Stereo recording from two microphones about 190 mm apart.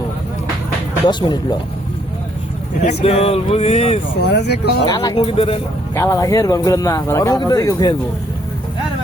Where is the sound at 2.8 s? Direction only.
30° left (ahead or behind).